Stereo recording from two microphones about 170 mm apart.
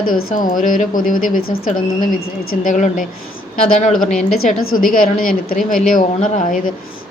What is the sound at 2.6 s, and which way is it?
Speech, 50° left (ahead or behind).